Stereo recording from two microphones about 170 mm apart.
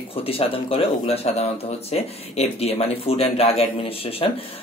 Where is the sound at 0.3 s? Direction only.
35° left (ahead or behind).